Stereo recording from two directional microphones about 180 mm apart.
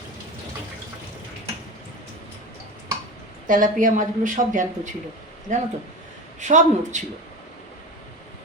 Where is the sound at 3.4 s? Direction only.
45° right (ahead or behind).